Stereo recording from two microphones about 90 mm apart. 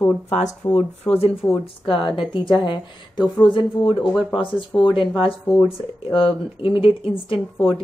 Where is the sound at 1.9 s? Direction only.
80° left.